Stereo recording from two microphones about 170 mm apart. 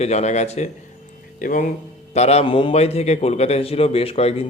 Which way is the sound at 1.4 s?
50° left (ahead or behind).